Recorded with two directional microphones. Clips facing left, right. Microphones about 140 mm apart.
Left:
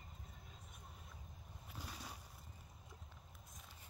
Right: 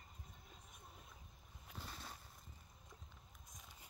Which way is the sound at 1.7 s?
10° left (ahead or behind).